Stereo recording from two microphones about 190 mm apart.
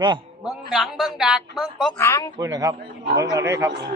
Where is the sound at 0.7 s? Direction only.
Centre (ahead or behind).